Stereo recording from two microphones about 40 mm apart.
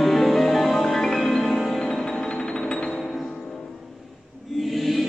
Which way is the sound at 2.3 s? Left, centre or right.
Left.